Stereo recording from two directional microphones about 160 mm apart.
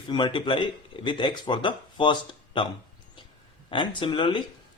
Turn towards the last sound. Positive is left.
turn(degrees=30)  # may be behind; listen again after turning